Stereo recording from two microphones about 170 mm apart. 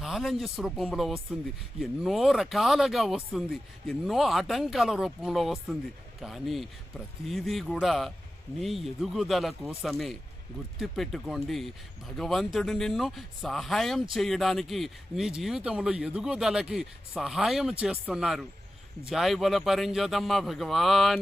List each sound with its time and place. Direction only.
0.0 s speech: centre (ahead or behind)